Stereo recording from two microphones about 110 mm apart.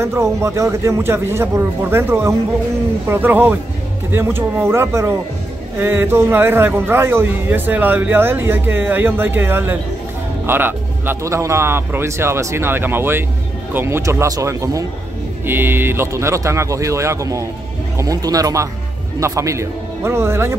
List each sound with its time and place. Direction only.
0.0 s a man's voice: 25° right (ahead or behind)
15.4 s a man's voice: 20° right (ahead or behind)